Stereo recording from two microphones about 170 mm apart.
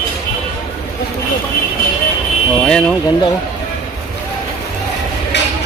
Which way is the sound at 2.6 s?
5° left (ahead or behind).